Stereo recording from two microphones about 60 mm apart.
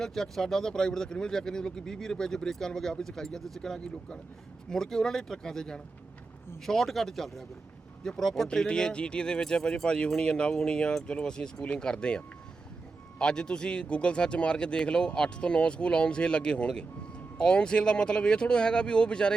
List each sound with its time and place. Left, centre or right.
0.0 s speech: centre